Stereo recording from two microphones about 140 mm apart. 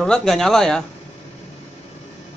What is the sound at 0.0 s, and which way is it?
Speech, 5° left (ahead or behind).